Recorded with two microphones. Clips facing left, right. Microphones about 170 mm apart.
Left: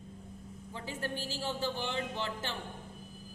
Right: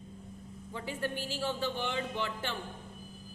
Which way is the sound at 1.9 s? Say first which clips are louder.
Right 1 dB; 25° left (ahead or behind).